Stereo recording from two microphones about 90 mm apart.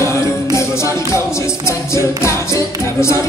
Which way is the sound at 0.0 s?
30° left (ahead or behind).